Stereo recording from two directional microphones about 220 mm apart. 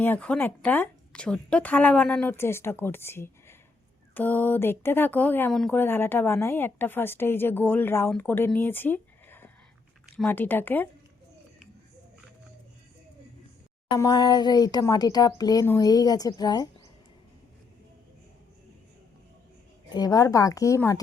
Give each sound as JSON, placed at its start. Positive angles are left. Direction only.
{"t": 0.0, "sound": "a woman's voice", "side_deg": 5}
{"t": 13.9, "sound": "a woman's voice", "side_deg": 20}
{"t": 19.9, "sound": "a woman's voice", "side_deg": 15}